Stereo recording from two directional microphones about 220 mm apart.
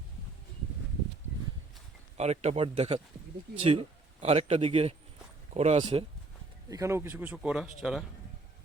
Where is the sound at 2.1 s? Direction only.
30° right (ahead or behind); by 8.0 s centre (ahead or behind).